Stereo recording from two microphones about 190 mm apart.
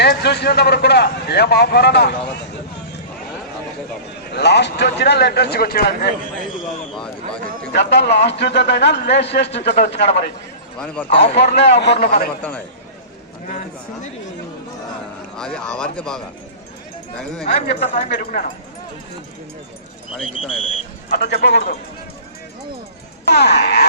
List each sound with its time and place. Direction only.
0.0 s a man's voice: 60° left (ahead or behind)
4.3 s a man's voice: 60° left (ahead or behind)
7.7 s a man's voice: 65° left (ahead or behind)
15.4 s speech: 5° left (ahead or behind)
17.7 s speech: 55° left (ahead or behind)
20.1 s speech: 5° right (ahead or behind)
21.1 s a man's voice: 60° left (ahead or behind)
23.3 s a man's voice: 60° left (ahead or behind)